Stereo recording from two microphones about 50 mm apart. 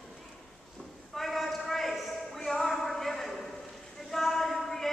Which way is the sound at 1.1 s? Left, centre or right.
Centre.